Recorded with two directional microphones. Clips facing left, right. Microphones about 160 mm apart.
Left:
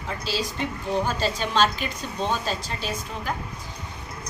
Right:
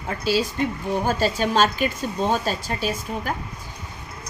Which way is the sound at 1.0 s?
45° right (ahead or behind).